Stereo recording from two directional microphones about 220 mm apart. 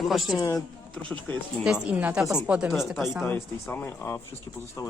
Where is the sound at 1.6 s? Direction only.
5° right (ahead or behind).